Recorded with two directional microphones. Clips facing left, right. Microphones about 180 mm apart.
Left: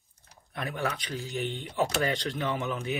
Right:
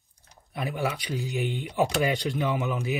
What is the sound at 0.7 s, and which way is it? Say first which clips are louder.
Speech: right 3 dB; 10° right (ahead or behind).